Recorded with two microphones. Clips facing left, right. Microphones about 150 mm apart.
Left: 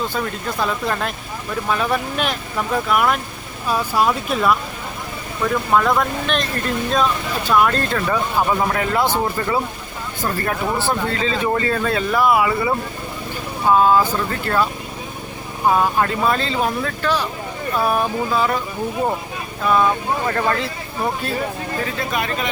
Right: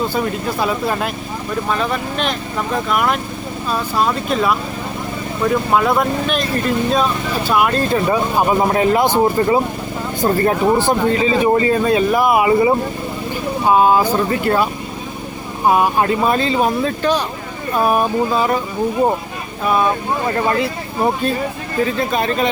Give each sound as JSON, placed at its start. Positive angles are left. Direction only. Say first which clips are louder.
{"t": 0.1, "sound": "speech", "louder": "right 5 dB", "side_deg": -10}
{"t": 1.7, "sound": "speech", "louder": "left 1 dB", "side_deg": 5}
{"t": 5.4, "sound": "speech", "louder": "right 2 dB", "side_deg": -10}
{"t": 7.9, "sound": "speech", "louder": "right 4 dB", "side_deg": -20}
{"t": 19.6, "sound": "speech", "louder": "right 1 dB", "side_deg": -15}
{"t": 22.1, "sound": "speech", "louder": "right 5 dB", "side_deg": -30}